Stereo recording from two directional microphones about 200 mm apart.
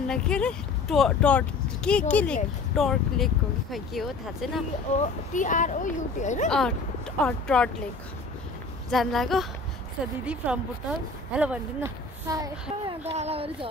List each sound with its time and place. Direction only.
0.0 s speech: 5° left (ahead or behind)
4.9 s speech: 35° left (ahead or behind)
7.2 s speech: 5° left (ahead or behind)
8.9 s speech: centre (ahead or behind)
12.3 s speech: 15° right (ahead or behind)
12.8 s a child's voice: 30° right (ahead or behind)